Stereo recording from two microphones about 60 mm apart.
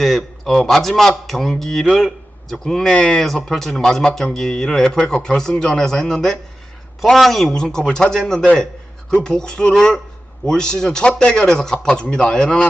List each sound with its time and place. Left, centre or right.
0.0 s speech: centre
2.9 s speech: centre
3.2 s speech: centre